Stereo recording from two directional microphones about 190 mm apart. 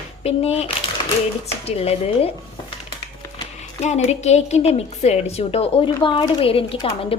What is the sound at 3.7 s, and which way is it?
A woman's voice, 35° left (ahead or behind).